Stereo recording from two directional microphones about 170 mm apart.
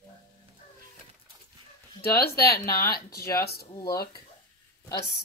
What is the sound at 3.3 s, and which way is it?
Speech, 65° left (ahead or behind).